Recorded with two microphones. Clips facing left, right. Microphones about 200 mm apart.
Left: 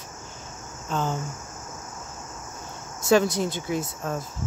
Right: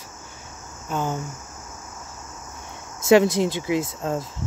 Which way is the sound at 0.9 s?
15° right (ahead or behind).